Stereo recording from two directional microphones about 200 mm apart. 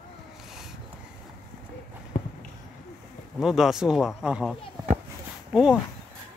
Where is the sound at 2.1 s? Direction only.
40° left (ahead or behind).